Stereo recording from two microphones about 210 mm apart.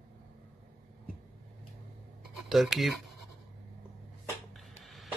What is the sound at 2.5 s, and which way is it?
Speech, centre (ahead or behind).